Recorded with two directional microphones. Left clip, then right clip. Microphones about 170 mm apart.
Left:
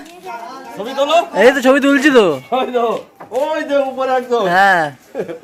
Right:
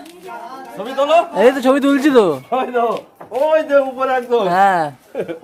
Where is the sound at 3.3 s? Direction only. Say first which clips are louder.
Right 2 dB; 15° right (ahead or behind); by 4.4 s 35° right (ahead or behind).